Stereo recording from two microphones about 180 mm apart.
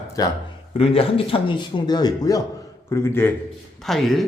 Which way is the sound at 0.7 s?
30° left (ahead or behind).